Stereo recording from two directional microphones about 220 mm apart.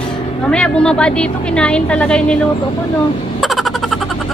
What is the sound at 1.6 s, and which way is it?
Speech, 5° left (ahead or behind).